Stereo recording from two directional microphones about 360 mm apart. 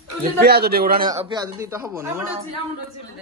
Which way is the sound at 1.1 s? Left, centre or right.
Centre.